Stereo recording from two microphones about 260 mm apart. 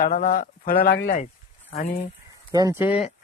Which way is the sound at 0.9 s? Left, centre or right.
Left.